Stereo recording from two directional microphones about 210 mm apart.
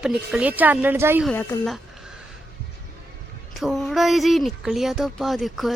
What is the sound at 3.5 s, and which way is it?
Speech, centre (ahead or behind).